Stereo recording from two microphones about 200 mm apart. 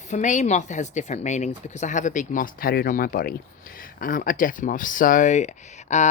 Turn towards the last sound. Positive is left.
turn(degrees=35)  # may be behind; listen again after turning